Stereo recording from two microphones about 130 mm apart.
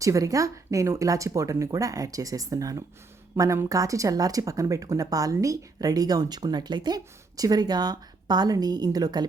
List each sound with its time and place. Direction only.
0.0 s speech: 25° right (ahead or behind)